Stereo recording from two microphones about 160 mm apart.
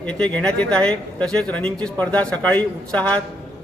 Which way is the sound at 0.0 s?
10° left (ahead or behind).